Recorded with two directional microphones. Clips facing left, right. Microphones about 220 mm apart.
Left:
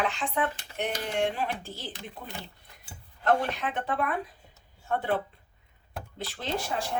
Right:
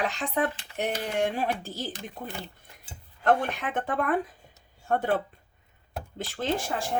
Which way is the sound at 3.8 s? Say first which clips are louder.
Right 4 dB; 50° right (ahead or behind).